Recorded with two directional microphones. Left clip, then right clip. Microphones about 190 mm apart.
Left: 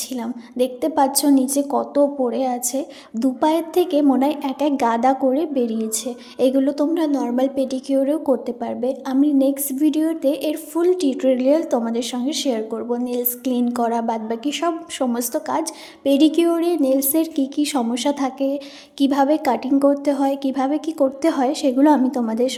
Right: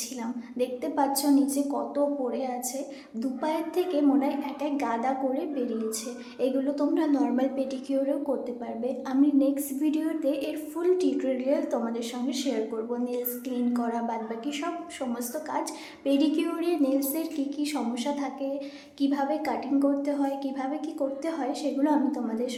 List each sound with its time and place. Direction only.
0.2 s a woman's voice: 35° left (ahead or behind)